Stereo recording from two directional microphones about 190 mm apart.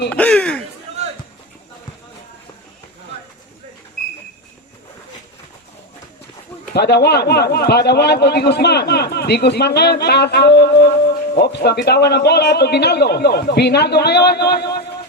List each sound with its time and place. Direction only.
0.1 s speech: 5° left (ahead or behind)
6.7 s a man's voice: 60° left (ahead or behind)